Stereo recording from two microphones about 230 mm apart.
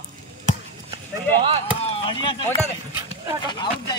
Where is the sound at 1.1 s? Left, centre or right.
Right.